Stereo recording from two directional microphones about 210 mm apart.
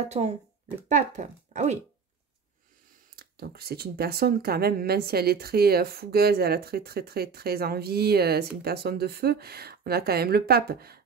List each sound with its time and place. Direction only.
0.1 s speech: 30° right (ahead or behind)
3.2 s speech: 45° right (ahead or behind)